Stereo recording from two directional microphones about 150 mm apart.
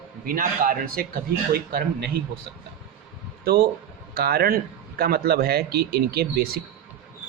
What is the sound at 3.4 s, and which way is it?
Speech, 90° right.